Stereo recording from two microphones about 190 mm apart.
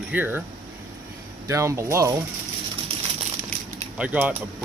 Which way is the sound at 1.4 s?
15° right (ahead or behind).